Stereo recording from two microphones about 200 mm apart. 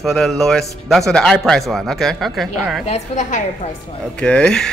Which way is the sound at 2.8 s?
35° left (ahead or behind).